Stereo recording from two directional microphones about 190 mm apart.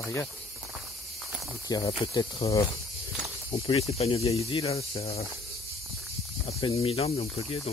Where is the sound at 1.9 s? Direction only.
30° left (ahead or behind).